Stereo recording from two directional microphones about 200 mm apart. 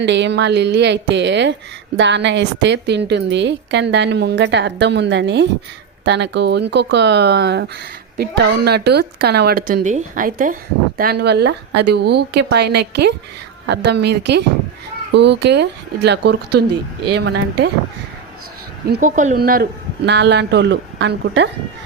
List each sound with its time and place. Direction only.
0.0 s a woman's voice: 60° right (ahead or behind)
18.9 s a woman's voice: 45° right (ahead or behind); by 21.5 s 60° right (ahead or behind)